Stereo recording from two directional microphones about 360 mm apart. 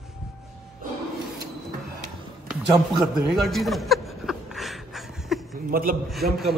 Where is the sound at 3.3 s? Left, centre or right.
Centre.